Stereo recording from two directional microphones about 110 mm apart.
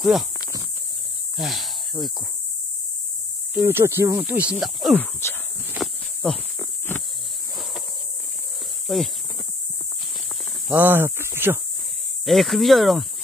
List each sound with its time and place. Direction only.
1.3 s cricket: centre (ahead or behind)
3.5 s speech: 20° right (ahead or behind)
4.2 s speech: 15° right (ahead or behind)
5.2 s a sound: 25° left (ahead or behind)
5.8 s a sound: 5° left (ahead or behind)
8.8 s speech: centre (ahead or behind)
10.7 s speech: 20° right (ahead or behind)
12.3 s speech: centre (ahead or behind)